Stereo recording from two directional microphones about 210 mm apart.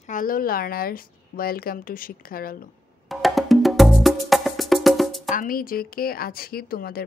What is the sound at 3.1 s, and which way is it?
Wood block, centre (ahead or behind).